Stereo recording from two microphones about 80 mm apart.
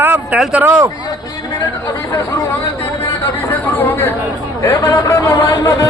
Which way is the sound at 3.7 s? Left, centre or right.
Left.